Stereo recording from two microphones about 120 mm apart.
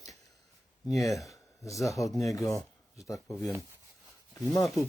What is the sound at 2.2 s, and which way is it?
Speech, 30° left (ahead or behind).